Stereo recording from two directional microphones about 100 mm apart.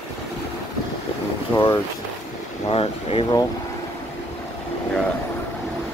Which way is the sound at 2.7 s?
70° left (ahead or behind).